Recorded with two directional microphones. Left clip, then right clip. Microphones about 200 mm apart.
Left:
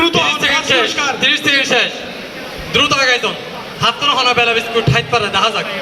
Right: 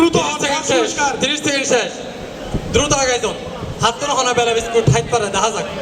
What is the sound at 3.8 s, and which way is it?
A man's voice, 70° right (ahead or behind).